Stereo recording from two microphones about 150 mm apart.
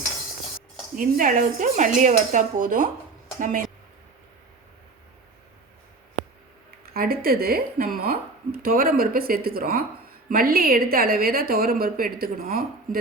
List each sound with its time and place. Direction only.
0.9 s dishes: 60° right (ahead or behind)
6.8 s a woman's voice: 90° right